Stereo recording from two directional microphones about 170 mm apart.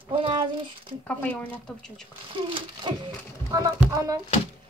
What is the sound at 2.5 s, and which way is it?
A woman's voice, 25° right (ahead or behind).